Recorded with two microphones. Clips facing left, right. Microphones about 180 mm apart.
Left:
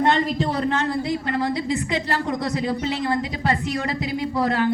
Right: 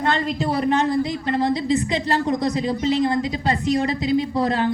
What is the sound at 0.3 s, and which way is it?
A woman's voice, 15° right (ahead or behind).